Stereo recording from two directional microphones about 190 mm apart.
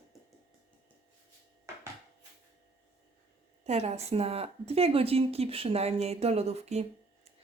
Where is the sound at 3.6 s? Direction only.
35° right (ahead or behind).